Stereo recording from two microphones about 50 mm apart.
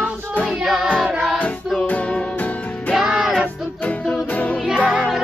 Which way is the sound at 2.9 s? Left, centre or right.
Centre.